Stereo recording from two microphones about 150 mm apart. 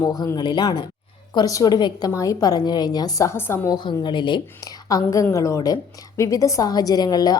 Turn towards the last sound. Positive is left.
turn(degrees=25)  # may be behind; listen again after turning